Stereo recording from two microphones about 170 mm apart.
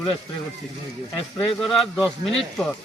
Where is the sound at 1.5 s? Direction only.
Centre (ahead or behind).